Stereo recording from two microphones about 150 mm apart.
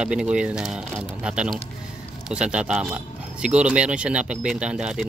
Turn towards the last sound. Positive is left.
turn(degrees=-5)  # may be behind; listen again after turning